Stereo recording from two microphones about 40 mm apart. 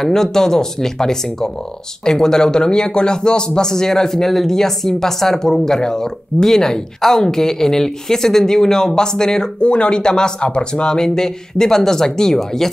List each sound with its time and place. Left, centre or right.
0.0 s a man's voice: centre